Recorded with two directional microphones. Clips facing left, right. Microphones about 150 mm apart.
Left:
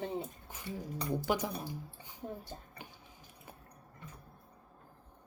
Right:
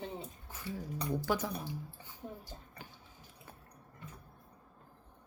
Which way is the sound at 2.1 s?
15° left (ahead or behind).